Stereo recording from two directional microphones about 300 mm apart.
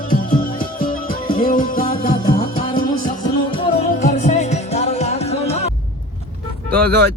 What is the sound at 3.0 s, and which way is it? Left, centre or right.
Music, centre.